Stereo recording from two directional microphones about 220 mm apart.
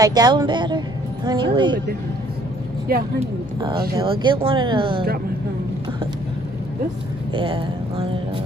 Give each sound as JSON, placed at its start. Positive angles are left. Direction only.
{"t": 0.0, "sound": "a woman's voice", "side_deg": -20}
{"t": 2.9, "sound": "speech", "side_deg": -40}
{"t": 3.9, "sound": "a woman's voice", "side_deg": -20}
{"t": 7.3, "sound": "a woman's voice", "side_deg": -25}